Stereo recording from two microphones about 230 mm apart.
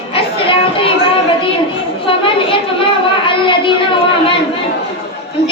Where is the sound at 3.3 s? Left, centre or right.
Left.